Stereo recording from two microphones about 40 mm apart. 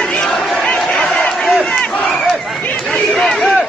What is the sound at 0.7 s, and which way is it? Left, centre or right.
Crowd, left.